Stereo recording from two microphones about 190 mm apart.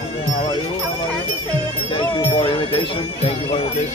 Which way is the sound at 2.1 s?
30° left (ahead or behind).